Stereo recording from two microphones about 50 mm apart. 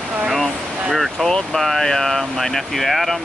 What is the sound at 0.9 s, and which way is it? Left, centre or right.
Speech, centre.